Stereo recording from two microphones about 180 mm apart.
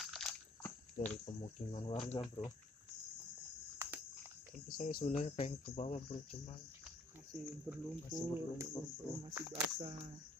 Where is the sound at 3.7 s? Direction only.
15° right (ahead or behind).